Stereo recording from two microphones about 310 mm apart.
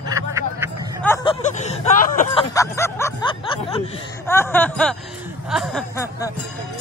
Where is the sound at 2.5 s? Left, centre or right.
Centre.